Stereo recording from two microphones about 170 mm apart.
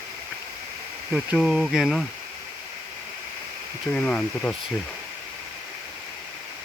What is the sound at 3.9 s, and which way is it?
Speech, 5° left (ahead or behind).